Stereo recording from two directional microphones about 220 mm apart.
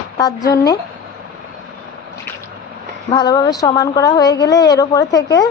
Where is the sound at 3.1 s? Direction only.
20° left (ahead or behind).